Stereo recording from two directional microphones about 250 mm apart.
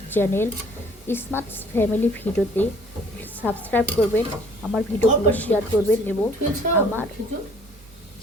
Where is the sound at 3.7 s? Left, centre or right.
Centre.